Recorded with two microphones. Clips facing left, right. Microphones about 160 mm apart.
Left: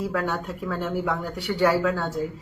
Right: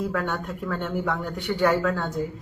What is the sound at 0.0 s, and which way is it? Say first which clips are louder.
Speech: left 1 dB; 5° left (ahead or behind).